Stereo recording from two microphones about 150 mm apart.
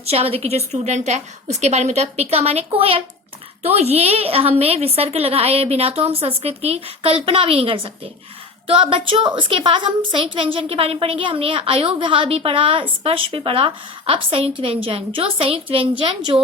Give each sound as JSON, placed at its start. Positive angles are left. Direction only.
{"t": 0.0, "sound": "a woman's voice", "side_deg": -40}